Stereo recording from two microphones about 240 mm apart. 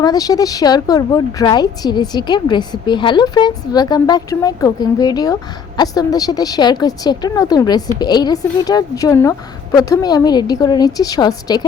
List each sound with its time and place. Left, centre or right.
0.0 s a woman's voice: centre